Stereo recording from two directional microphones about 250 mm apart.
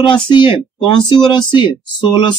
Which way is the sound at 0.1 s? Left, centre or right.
Centre.